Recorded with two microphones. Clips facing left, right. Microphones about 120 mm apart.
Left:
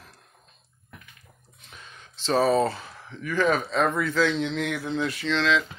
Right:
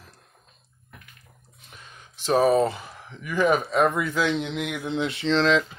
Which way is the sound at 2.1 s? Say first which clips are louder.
Right 2 dB; 15° right (ahead or behind).